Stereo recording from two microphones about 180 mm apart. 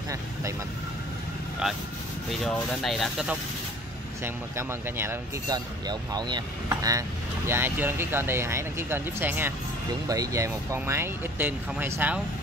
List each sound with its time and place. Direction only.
0.1 s speech: 15° right (ahead or behind)
2.4 s speech: centre (ahead or behind)
4.2 s speech: 15° right (ahead or behind)